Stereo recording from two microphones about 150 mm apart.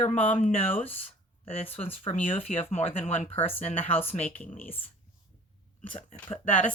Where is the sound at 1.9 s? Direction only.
40° left (ahead or behind).